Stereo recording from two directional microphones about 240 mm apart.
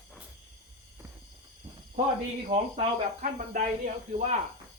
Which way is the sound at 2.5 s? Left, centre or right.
Right.